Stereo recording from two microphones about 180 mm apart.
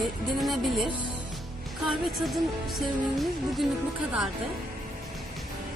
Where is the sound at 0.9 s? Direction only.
25° right (ahead or behind).